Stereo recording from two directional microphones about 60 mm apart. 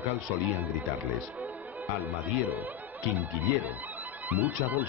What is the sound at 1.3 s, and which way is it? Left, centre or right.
Music, right.